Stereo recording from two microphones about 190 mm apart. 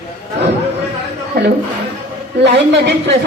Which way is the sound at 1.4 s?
60° right (ahead or behind).